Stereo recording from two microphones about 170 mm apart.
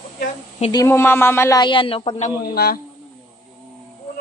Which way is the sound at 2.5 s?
65° left (ahead or behind).